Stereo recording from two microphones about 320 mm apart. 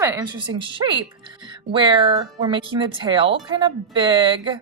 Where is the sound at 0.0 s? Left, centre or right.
Centre.